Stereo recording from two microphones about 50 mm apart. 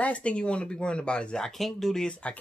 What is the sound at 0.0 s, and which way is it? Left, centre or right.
Speech, left.